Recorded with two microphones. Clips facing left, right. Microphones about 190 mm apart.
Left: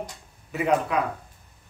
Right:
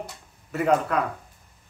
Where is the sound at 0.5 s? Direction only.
5° left (ahead or behind).